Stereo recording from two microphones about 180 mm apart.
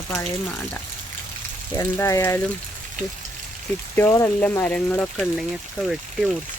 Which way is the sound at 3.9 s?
15° left (ahead or behind).